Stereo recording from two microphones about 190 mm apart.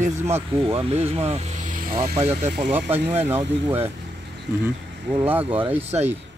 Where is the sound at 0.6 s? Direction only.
30° right (ahead or behind); by 2.0 s 45° right (ahead or behind).